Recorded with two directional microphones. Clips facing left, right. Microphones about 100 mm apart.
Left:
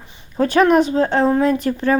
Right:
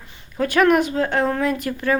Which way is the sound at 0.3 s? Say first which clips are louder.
Left 3 dB; 30° left (ahead or behind).